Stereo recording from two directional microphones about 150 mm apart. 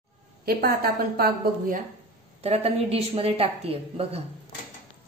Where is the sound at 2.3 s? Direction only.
45° right (ahead or behind).